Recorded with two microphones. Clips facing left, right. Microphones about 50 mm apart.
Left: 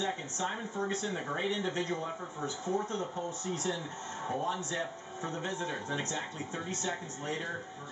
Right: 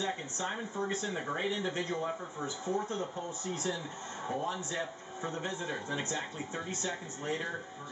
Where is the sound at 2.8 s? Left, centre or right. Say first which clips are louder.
Left 1 dB; centre.